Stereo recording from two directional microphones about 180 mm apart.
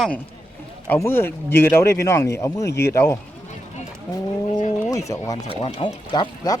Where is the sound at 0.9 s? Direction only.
15° left (ahead or behind).